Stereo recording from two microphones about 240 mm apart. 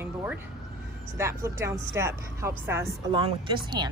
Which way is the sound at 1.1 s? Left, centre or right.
Centre.